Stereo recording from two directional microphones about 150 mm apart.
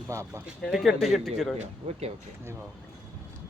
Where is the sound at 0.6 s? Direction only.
Centre (ahead or behind).